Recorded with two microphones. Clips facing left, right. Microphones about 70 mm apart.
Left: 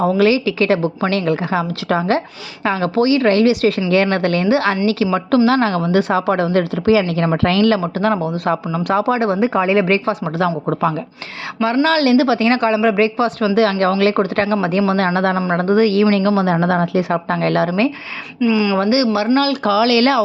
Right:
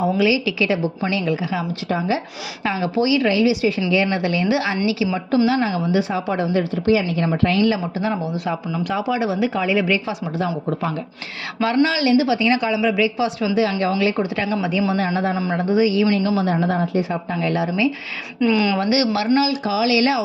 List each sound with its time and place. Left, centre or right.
0.0 s a woman's voice: left
2.6 s a woman's voice: left
4.4 s a woman's voice: left
4.9 s a woman's voice: left
5.5 s a woman's voice: left
10.3 s speech: left
11.9 s a woman's voice: left
15.5 s a woman's voice: left
16.1 s speech: left
18.3 s speech: centre
18.8 s speech: left
19.4 s a woman's voice: left